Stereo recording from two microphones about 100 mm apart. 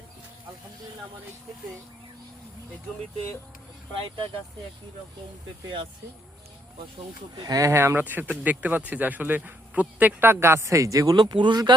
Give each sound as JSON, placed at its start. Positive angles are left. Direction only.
{"t": 5.6, "sound": "speech", "side_deg": -55}
{"t": 7.3, "sound": "speech", "side_deg": -35}